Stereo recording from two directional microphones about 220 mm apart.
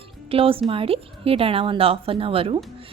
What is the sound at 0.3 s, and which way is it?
Speech, 25° right (ahead or behind).